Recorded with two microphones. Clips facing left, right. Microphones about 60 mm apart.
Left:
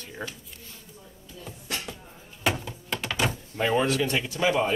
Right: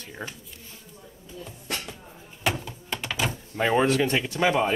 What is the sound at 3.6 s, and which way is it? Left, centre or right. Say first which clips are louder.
Speech: right 2 dB; centre.